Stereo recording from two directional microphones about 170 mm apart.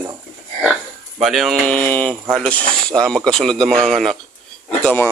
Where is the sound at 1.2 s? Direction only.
Centre (ahead or behind).